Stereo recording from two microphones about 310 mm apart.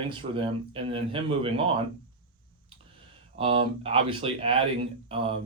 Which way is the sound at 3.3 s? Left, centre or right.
Centre.